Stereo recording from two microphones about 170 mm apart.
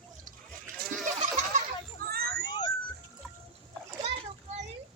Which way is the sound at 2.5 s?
25° left (ahead or behind).